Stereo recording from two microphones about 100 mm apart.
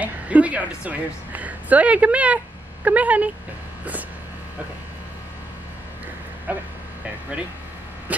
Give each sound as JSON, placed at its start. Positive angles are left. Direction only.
{"t": 0.0, "sound": "a woman's voice", "side_deg": -15}
{"t": 6.5, "sound": "speech", "side_deg": -15}